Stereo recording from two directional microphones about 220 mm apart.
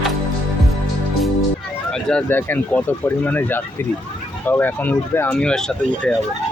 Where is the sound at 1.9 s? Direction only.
5° left (ahead or behind).